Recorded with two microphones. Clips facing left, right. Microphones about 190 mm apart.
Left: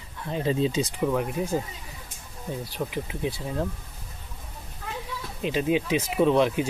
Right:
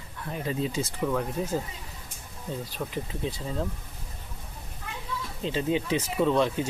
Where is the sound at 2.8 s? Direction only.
15° left (ahead or behind).